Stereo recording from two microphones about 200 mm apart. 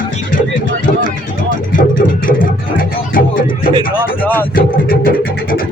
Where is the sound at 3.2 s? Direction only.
45° left (ahead or behind).